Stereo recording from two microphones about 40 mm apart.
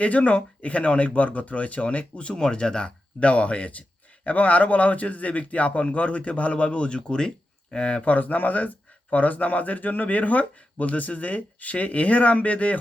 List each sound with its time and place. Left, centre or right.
0.0 s speech: left
2.3 s speech: left
8.0 s speech: left